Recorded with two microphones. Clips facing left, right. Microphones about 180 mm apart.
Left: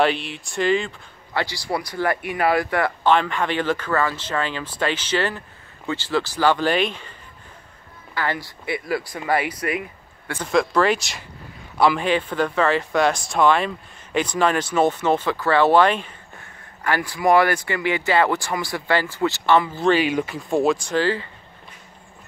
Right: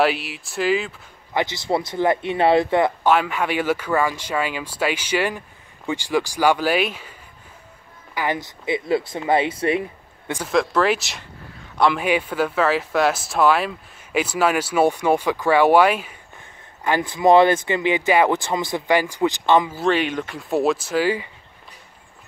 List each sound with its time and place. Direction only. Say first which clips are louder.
0.0 s speech: even; 5° right (ahead or behind)
1.3 s speech: right 3 dB; 20° right (ahead or behind)
3.1 s speech: even; 10° right (ahead or behind); by 10.3 s 30° right (ahead or behind)
10.5 s speech: even; centre (ahead or behind)
16.8 s speech: right 3 dB; 20° right (ahead or behind)
19.8 s speech: left 2 dB; centre (ahead or behind)